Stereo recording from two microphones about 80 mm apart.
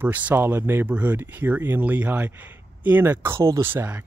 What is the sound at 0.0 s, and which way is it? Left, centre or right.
Speech, right.